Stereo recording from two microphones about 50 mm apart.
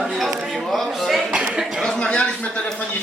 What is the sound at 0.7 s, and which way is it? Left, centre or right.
Speech, centre.